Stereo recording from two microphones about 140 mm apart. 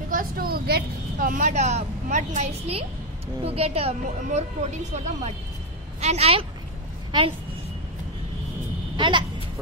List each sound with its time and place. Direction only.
0.1 s a sound: 85° right
1.2 s a woman's voice: 65° right (ahead or behind); by 7.3 s 35° right (ahead or behind)
8.9 s speech: 35° right (ahead or behind)